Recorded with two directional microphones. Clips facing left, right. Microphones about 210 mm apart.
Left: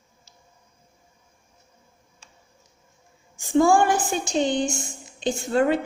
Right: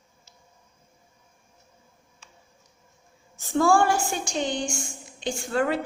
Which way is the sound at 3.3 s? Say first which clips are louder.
Left 3 dB; 15° left (ahead or behind).